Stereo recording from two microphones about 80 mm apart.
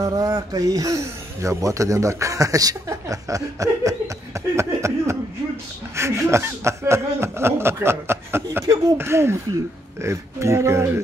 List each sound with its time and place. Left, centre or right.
0.0 s speech: right